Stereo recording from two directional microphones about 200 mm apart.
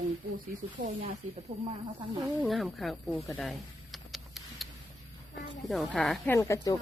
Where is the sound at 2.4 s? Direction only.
Centre (ahead or behind).